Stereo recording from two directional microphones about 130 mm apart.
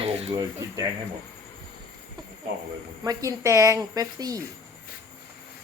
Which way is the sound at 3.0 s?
30° right (ahead or behind).